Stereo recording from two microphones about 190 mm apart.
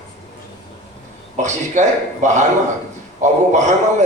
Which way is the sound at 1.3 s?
40° right (ahead or behind).